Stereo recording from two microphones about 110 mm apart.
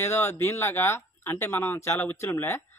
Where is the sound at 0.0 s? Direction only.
25° left (ahead or behind).